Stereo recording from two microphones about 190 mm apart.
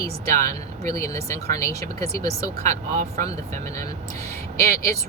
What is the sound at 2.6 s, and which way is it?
Speech, 35° right (ahead or behind).